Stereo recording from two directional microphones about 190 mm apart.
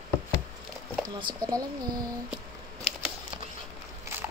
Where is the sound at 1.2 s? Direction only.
20° right (ahead or behind).